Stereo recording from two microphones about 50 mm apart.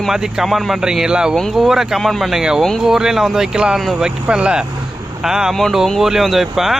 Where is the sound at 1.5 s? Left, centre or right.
Centre.